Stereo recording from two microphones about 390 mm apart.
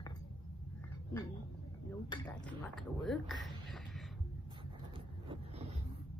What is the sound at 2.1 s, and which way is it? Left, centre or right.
Speech, centre.